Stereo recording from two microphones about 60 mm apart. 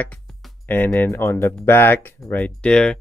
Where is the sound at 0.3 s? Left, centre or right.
Centre.